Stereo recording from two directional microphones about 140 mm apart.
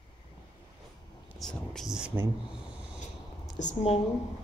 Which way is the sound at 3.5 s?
55° left (ahead or behind).